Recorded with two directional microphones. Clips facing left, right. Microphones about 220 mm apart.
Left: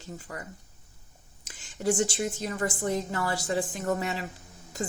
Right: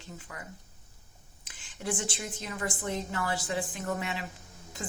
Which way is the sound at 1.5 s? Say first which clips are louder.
Left 7 dB; 40° left (ahead or behind).